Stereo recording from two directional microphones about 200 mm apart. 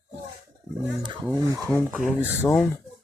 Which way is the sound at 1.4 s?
15° right (ahead or behind).